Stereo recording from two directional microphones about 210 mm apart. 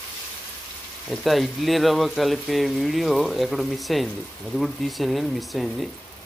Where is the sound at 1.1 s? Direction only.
Centre (ahead or behind).